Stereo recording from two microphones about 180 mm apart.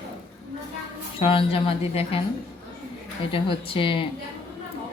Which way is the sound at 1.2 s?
30° left (ahead or behind).